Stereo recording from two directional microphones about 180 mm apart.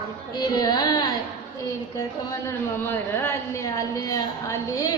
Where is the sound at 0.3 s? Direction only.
20° left (ahead or behind).